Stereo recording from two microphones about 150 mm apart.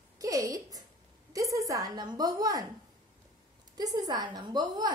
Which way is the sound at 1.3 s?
20° right (ahead or behind).